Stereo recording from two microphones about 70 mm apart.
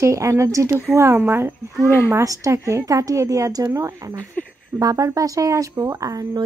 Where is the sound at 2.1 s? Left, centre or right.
Right.